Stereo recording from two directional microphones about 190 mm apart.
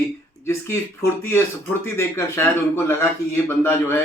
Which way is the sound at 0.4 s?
15° left (ahead or behind).